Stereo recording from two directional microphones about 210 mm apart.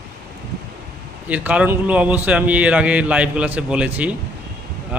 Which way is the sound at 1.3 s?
5° right (ahead or behind).